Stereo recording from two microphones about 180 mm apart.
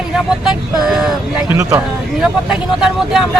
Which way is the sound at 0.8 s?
Centre (ahead or behind).